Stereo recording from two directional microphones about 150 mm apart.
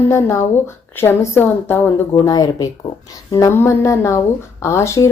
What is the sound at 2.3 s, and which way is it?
Speech, 25° left (ahead or behind).